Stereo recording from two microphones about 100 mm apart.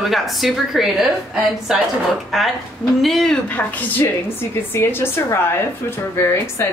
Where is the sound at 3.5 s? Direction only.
15° left (ahead or behind).